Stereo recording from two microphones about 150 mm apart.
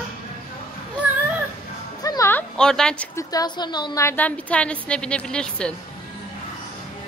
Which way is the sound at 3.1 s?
25° left (ahead or behind).